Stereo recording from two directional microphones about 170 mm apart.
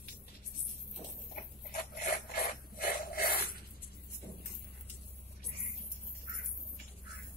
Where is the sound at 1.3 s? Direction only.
60° left (ahead or behind).